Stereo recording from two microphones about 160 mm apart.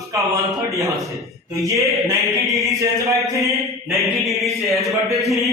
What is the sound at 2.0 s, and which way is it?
Speech, 20° right (ahead or behind).